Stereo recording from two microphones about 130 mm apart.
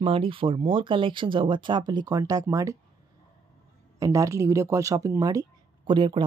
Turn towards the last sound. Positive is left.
turn(degrees=-40)  # may be behind; listen again after turning